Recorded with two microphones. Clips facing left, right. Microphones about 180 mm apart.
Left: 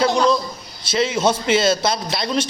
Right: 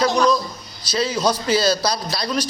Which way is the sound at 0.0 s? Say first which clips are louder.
Left 1 dB; 25° left (ahead or behind).